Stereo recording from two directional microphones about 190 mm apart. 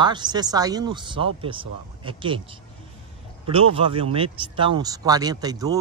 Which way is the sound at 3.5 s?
30° right (ahead or behind).